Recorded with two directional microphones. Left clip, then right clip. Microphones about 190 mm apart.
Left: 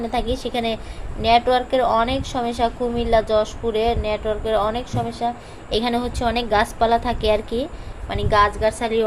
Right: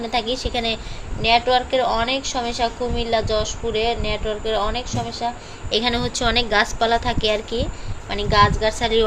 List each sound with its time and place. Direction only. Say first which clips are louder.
0.1 s a woman's voice: right 4 dB; 15° left (ahead or behind)